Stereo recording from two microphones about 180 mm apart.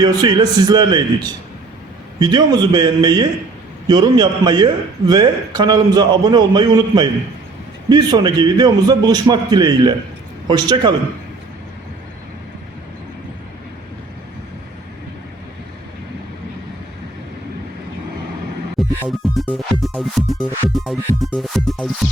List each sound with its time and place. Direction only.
0.0 s a man's voice: 20° right (ahead or behind)
19.2 s music: centre (ahead or behind)